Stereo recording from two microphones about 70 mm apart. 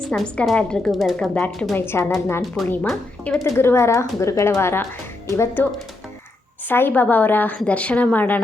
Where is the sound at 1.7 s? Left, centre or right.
Left.